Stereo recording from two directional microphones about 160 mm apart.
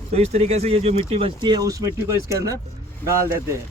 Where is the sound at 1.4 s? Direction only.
25° right (ahead or behind).